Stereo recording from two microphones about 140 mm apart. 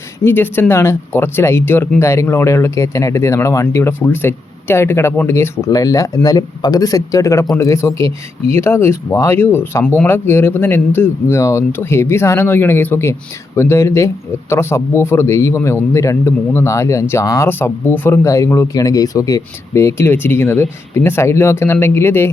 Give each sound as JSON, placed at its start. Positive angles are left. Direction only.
{"t": 0.3, "sound": "a man's voice", "side_deg": 15}